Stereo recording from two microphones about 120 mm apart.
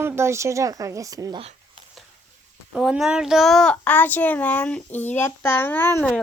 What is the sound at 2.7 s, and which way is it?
A child's voice, 5° right (ahead or behind).